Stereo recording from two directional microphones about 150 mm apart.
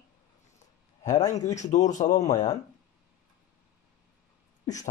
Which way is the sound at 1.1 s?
50° left (ahead or behind).